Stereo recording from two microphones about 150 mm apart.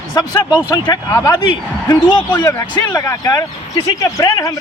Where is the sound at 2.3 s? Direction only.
20° left (ahead or behind).